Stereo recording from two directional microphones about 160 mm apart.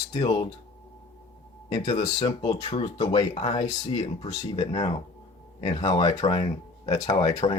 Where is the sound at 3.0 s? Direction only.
25° left (ahead or behind).